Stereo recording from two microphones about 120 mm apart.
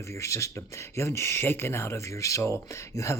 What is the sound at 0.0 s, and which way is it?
Speech, 25° left (ahead or behind).